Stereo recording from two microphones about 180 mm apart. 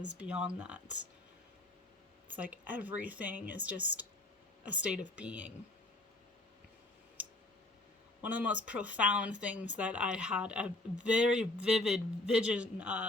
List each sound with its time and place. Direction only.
0.2 s speech: 5° right (ahead or behind)
2.2 s speech: 10° right (ahead or behind)
8.2 s a man's voice: 10° right (ahead or behind)